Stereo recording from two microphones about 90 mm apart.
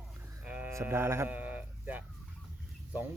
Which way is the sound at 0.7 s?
30° right (ahead or behind).